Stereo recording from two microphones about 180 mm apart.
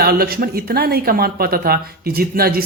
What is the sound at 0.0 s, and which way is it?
Speech, 55° right (ahead or behind).